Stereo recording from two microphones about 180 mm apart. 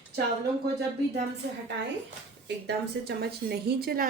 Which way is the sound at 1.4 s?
75° right (ahead or behind).